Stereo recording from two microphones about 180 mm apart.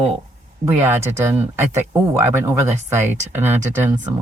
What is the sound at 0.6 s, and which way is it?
Speech, 10° right (ahead or behind).